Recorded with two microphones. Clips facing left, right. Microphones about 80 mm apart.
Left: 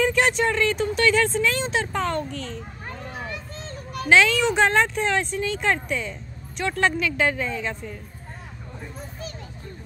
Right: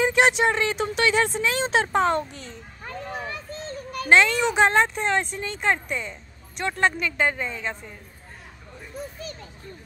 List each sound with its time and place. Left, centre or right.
0.0 s speech: right
2.2 s a child's voice: left
3.3 s a sound: right
4.1 s speech: centre